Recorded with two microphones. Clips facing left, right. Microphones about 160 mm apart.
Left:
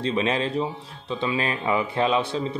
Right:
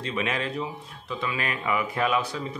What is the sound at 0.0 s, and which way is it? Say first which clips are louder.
Speech: left 5 dB; 30° left (ahead or behind).